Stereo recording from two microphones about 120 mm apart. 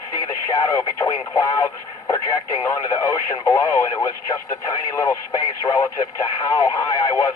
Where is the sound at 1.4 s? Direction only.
25° left (ahead or behind).